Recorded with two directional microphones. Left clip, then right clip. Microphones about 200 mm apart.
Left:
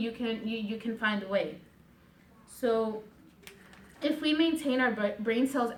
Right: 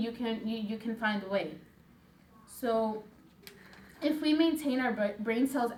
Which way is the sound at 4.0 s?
10° left (ahead or behind).